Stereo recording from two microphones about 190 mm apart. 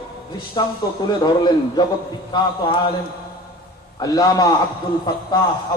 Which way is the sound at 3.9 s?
20° left (ahead or behind).